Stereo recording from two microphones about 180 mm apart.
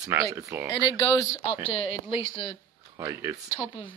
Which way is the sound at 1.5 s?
35° left (ahead or behind).